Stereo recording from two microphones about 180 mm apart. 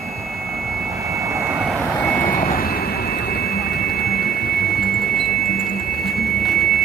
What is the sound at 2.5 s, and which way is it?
Vehicle, 55° left (ahead or behind).